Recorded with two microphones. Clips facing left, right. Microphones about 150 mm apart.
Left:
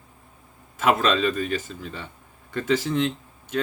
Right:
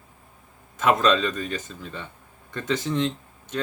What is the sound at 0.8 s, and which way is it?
Speech, 10° left (ahead or behind).